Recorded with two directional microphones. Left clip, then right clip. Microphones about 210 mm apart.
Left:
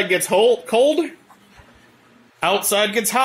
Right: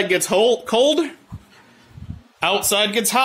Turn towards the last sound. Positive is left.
turn(degrees=0)  # may be behind; listen again after turning